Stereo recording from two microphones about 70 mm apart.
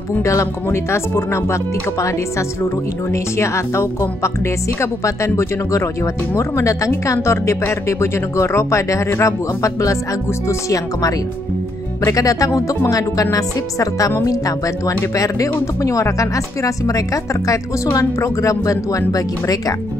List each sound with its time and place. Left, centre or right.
0.2 s speech: left